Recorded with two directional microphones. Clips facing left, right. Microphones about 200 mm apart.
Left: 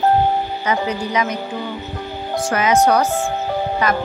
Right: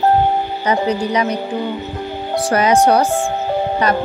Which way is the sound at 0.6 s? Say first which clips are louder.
Right 6 dB; 35° right (ahead or behind).